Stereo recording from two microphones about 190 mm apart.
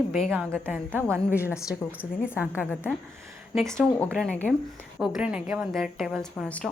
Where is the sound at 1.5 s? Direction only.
15° left (ahead or behind).